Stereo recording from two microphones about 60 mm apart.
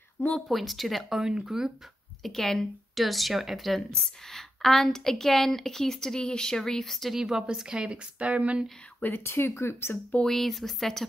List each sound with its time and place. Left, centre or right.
0.5 s speech: centre
1.2 s a woman's voice: centre
2.2 s a woman's voice: centre
7.2 s a woman's voice: centre
9.0 s speech: left
10.2 s speech: centre